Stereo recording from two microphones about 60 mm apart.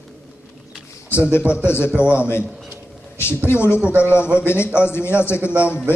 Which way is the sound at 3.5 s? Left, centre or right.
Left.